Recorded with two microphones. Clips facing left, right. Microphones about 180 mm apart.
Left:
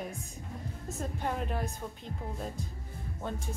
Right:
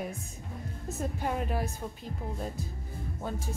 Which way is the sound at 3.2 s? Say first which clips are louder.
Right 1 dB; 5° right (ahead or behind).